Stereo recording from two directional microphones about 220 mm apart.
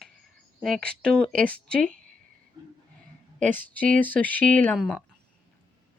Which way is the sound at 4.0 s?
5° left (ahead or behind).